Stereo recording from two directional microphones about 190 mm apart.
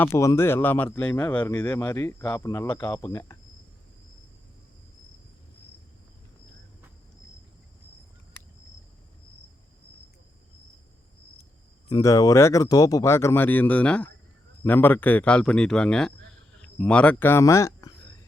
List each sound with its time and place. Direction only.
0.0 s speech: 15° left (ahead or behind)
11.9 s speech: 20° left (ahead or behind)